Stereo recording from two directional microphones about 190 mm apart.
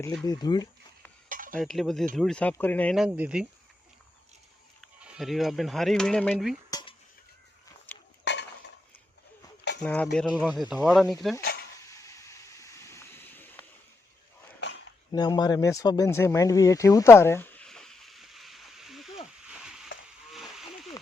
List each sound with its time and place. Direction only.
0.3 s speech: 20° left (ahead or behind)
1.3 s cutlery: 45° right (ahead or behind)
1.5 s speech: centre (ahead or behind)
4.8 s speech: 5° right (ahead or behind)
6.7 s dishes: 20° left (ahead or behind)
7.9 s dishes: 10° left (ahead or behind)
8.2 s dishes: 65° left (ahead or behind)
9.8 s speech: 5° left (ahead or behind)
11.3 s a sound: 55° left (ahead or behind)
11.9 s a sound: 15° left (ahead or behind)
15.1 s a sound: 20° left (ahead or behind); by 20.9 s centre (ahead or behind)